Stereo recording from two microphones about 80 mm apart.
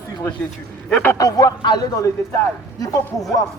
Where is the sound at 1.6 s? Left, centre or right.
Left.